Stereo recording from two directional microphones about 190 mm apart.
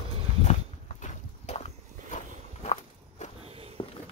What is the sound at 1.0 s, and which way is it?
Clip-clop, 35° left (ahead or behind).